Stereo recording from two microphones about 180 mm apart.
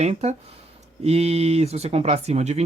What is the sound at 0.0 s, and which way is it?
Speech, 35° right (ahead or behind).